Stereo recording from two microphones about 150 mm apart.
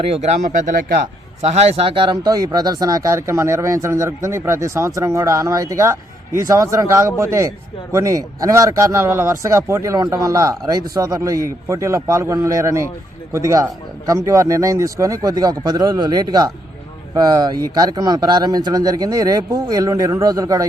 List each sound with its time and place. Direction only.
0.0 s speech: 40° right (ahead or behind)
0.4 s speech: 60° right (ahead or behind); by 1.1 s 75° right (ahead or behind)
1.4 s speech: 45° right (ahead or behind); by 20.7 s 25° right (ahead or behind)